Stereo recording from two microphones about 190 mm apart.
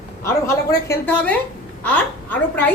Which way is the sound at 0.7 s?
10° left (ahead or behind).